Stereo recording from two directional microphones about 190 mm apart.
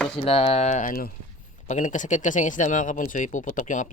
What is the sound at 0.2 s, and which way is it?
Speech, 30° left (ahead or behind).